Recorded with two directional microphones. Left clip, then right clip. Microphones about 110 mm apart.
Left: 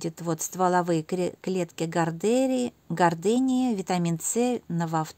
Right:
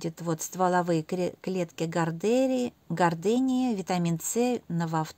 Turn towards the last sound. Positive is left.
turn(degrees=15)  # may be behind; listen again after turning